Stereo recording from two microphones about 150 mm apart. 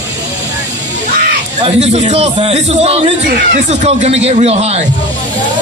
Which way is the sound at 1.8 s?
50° right (ahead or behind).